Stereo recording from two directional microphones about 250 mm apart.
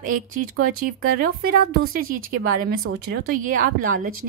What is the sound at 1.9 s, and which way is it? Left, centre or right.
Speech, right.